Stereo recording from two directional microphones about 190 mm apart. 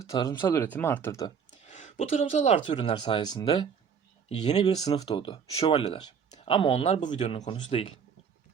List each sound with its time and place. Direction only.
0.1 s speech: 20° left (ahead or behind)
1.6 s speech: 35° left (ahead or behind)